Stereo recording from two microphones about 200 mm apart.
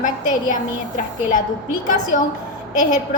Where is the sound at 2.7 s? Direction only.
40° left (ahead or behind).